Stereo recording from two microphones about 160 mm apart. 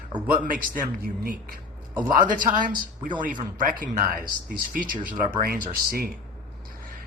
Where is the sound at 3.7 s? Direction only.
60° right (ahead or behind).